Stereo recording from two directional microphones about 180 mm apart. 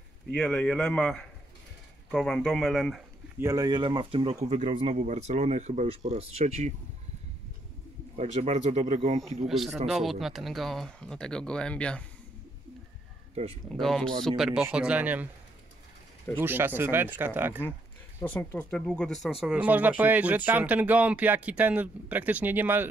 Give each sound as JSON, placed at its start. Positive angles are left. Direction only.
{"t": 0.3, "sound": "speech", "side_deg": 5}
{"t": 3.3, "sound": "speech", "side_deg": -20}
{"t": 4.5, "sound": "speech", "side_deg": -40}
{"t": 8.2, "sound": "speech", "side_deg": -40}
{"t": 9.5, "sound": "speech", "side_deg": 0}
{"t": 13.3, "sound": "speech", "side_deg": -35}
{"t": 13.7, "sound": "speech", "side_deg": 5}
{"t": 16.3, "sound": "speech", "side_deg": -10}
{"t": 18.2, "sound": "speech", "side_deg": 10}
{"t": 19.4, "sound": "speech", "side_deg": -10}